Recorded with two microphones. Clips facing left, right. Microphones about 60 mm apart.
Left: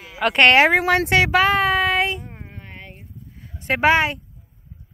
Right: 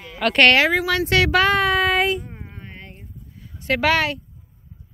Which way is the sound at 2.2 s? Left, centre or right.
Left.